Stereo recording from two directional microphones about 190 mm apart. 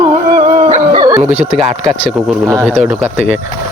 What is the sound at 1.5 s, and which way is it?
Dog, 30° right (ahead or behind).